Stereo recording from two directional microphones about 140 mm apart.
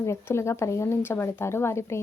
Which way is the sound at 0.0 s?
20° left (ahead or behind).